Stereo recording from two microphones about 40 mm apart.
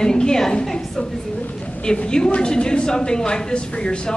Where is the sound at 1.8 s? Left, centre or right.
Left.